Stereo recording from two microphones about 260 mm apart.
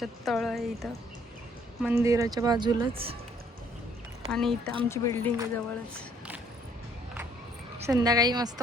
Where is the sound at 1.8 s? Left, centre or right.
Centre.